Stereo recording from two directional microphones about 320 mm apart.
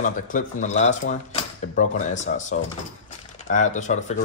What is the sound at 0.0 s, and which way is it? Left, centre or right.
Speech, left.